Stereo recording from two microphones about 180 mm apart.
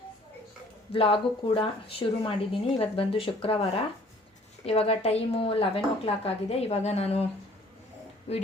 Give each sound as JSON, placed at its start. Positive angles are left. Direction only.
{"t": 0.9, "sound": "speech", "side_deg": 30}
{"t": 8.3, "sound": "speech", "side_deg": 35}